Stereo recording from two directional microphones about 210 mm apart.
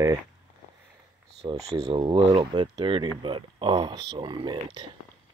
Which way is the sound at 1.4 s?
30° right (ahead or behind).